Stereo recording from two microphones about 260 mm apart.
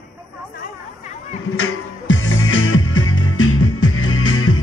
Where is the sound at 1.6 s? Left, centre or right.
Left.